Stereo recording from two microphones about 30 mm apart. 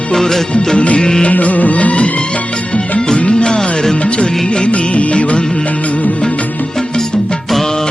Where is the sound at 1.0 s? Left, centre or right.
Left.